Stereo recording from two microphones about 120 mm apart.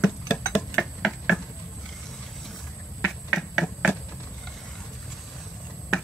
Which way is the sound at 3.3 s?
Centre (ahead or behind).